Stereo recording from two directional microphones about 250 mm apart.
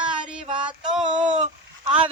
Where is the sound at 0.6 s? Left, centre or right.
Centre.